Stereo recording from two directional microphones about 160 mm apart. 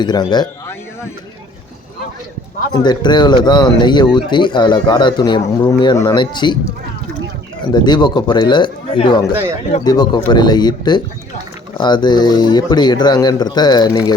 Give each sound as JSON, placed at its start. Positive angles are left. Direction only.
{"t": 0.0, "sound": "speech", "side_deg": 25}
{"t": 2.8, "sound": "speech", "side_deg": 25}
{"t": 7.7, "sound": "speech", "side_deg": 25}
{"t": 9.3, "sound": "speech", "side_deg": -15}
{"t": 9.8, "sound": "speech", "side_deg": 25}